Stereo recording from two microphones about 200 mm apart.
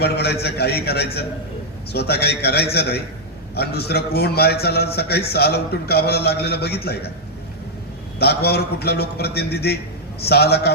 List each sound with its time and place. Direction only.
0.0 s a man's voice: 55° left (ahead or behind)
8.2 s a man's voice: 55° left (ahead or behind)